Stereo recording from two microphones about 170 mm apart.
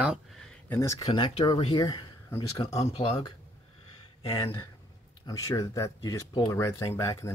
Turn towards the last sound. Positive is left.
turn(degrees=20)  # may be behind; listen again after turning